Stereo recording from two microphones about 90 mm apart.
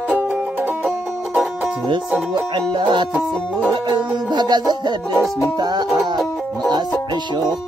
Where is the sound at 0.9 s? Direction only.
10° right (ahead or behind).